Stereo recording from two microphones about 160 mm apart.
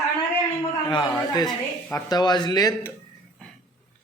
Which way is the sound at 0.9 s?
25° left (ahead or behind).